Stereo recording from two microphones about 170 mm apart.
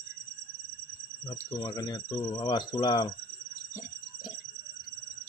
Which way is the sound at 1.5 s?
25° left (ahead or behind).